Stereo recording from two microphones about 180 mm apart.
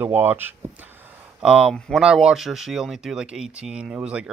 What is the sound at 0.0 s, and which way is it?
Speech, 10° right (ahead or behind).